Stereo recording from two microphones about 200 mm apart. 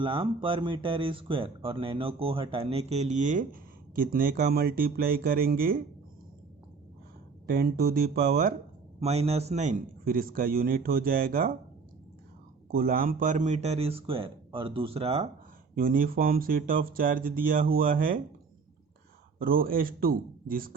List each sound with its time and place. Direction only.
0.0 s speech: 25° right (ahead or behind); by 5.8 s 45° right (ahead or behind)
7.4 s a man's voice: 50° right (ahead or behind)
9.0 s a man's voice: 30° right (ahead or behind)
12.7 s speech: 45° right (ahead or behind); by 15.3 s 30° right (ahead or behind)
15.7 s a man's voice: 45° right (ahead or behind)
19.4 s a man's voice: 45° right (ahead or behind)